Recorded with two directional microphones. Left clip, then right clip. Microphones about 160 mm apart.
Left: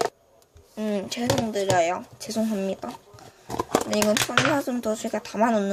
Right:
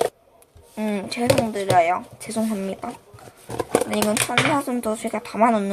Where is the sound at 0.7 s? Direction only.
10° left (ahead or behind).